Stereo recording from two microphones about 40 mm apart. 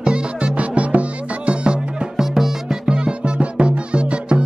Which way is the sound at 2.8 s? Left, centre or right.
Right.